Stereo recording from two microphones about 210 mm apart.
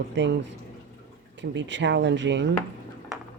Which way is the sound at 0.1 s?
55° right (ahead or behind).